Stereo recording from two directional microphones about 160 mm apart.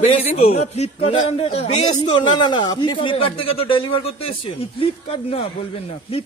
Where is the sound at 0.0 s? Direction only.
40° left (ahead or behind).